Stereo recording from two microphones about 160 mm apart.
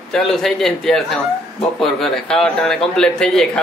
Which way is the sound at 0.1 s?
Centre (ahead or behind).